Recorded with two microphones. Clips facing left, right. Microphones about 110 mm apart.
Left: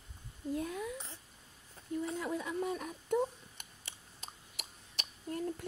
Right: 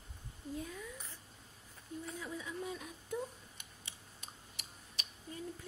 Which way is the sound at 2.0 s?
65° left (ahead or behind).